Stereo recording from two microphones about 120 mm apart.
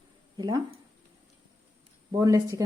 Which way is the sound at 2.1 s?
30° right (ahead or behind).